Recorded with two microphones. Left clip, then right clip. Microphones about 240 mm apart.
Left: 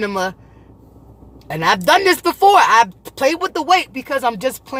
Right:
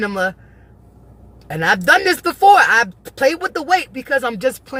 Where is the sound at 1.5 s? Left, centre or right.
Centre.